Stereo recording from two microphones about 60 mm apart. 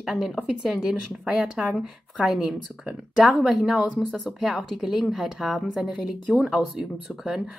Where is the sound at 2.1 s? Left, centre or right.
Centre.